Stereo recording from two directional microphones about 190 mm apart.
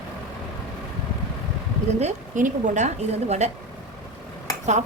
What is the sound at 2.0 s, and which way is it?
A woman's voice, 40° right (ahead or behind).